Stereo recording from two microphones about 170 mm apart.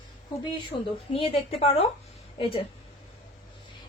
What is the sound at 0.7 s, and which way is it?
A woman's voice, 35° left (ahead or behind).